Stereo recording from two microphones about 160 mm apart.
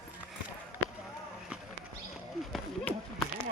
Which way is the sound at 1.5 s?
5° right (ahead or behind).